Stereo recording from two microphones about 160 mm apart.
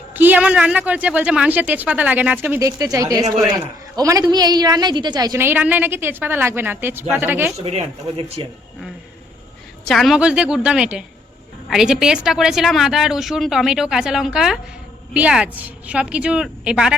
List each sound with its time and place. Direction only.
0.1 s a woman's voice: 10° right (ahead or behind)
7.6 s speech: 40° right (ahead or behind)
9.8 s a woman's voice: centre (ahead or behind)